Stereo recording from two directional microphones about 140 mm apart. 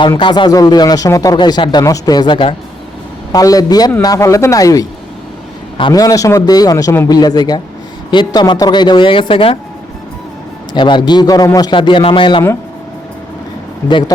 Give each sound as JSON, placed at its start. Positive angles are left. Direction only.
{"t": 0.2, "sound": "speech", "side_deg": 35}
{"t": 3.3, "sound": "speech", "side_deg": 25}
{"t": 5.9, "sound": "a man's voice", "side_deg": 25}
{"t": 10.8, "sound": "a man's voice", "side_deg": 35}